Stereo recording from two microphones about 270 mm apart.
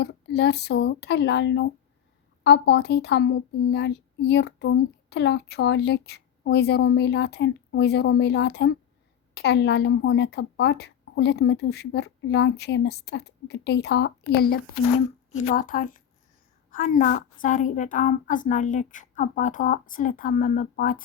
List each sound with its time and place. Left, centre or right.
0.0 s a woman's voice: left